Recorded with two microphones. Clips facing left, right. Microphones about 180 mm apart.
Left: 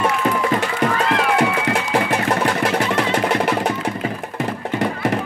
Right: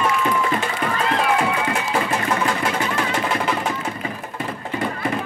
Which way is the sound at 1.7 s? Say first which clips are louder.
Left 3 dB; 70° left (ahead or behind).